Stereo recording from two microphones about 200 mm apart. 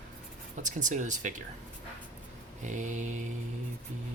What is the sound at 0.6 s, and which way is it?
Speech, 40° right (ahead or behind).